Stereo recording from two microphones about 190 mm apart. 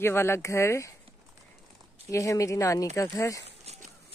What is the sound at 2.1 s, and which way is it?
Speech, 15° left (ahead or behind).